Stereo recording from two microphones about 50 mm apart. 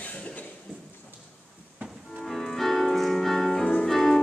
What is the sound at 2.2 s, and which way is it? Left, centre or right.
Music, centre.